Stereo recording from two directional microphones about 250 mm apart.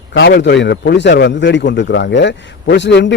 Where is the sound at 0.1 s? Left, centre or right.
Left.